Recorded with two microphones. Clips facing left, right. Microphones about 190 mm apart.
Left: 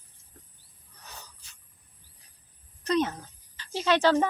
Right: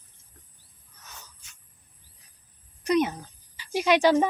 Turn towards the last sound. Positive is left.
turn(degrees=-15)  # may be behind; listen again after turning